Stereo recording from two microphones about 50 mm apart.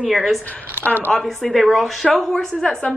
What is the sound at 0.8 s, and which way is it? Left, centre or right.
Speech, right.